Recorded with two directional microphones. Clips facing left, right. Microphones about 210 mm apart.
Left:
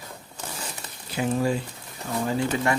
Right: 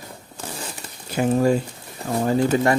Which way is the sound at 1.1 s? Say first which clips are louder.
Right 6 dB; 45° right (ahead or behind).